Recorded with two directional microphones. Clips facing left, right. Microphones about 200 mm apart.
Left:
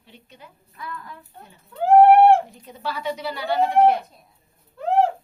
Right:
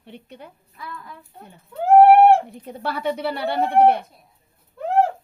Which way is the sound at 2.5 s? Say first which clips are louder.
Right 3 dB; 60° right (ahead or behind).